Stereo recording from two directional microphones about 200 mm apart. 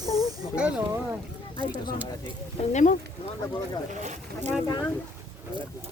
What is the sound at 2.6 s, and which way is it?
Speech, 35° left (ahead or behind).